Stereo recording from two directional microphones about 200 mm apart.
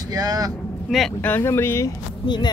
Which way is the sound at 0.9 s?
5° left (ahead or behind).